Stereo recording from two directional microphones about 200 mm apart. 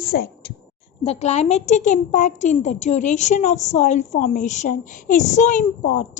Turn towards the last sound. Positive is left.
turn(degrees=40)  # may be behind; listen again after turning